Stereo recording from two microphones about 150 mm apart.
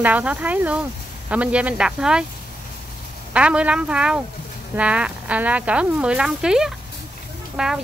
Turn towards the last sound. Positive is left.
turn(degrees=-5)  # may be behind; listen again after turning